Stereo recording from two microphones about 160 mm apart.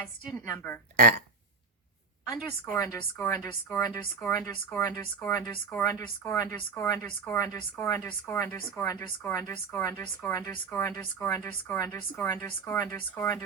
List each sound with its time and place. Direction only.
0.3 s speech: 15° left (ahead or behind)
0.9 s speech: 70° right (ahead or behind)
2.5 s a woman's voice: 20° left (ahead or behind)